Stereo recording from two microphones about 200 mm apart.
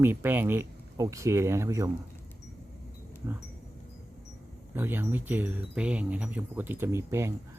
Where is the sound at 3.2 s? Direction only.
15° right (ahead or behind).